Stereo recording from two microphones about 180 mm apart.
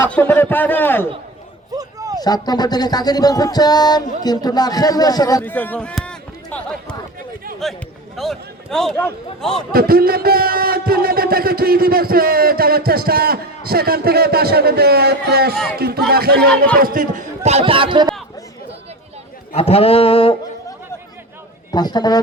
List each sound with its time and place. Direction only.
0.1 s a man's voice: 10° left (ahead or behind)
1.8 s a sound: 20° right (ahead or behind)
2.1 s music: 20° left (ahead or behind); by 6.9 s 5° left (ahead or behind)
7.6 s a man's voice: centre (ahead or behind)
9.7 s a man's voice: 55° right (ahead or behind); by 18.1 s 25° right (ahead or behind)
19.5 s a sound: 35° left (ahead or behind)
21.7 s music: 25° left (ahead or behind)